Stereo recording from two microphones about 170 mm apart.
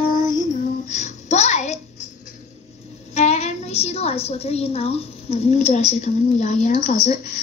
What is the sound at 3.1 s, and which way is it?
A woman's voice, 40° left (ahead or behind).